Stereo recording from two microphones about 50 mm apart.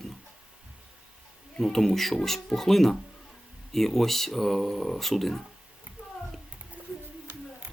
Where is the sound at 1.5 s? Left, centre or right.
Centre.